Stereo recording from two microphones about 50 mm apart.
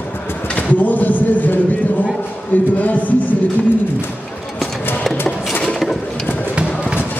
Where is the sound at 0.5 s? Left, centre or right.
Left.